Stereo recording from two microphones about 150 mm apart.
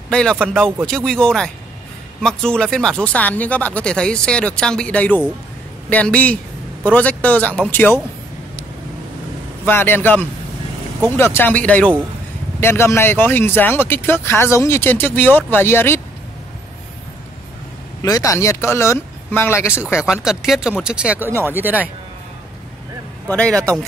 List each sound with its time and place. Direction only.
0.1 s speech: 5° left (ahead or behind)
0.6 s speech: 10° right (ahead or behind)
0.8 s speech: 5° left (ahead or behind)
9.7 s speech: 15° left (ahead or behind)
18.0 s speech: 25° left (ahead or behind)
20.0 s speech: 5° right (ahead or behind)
23.3 s speech: 5° left (ahead or behind)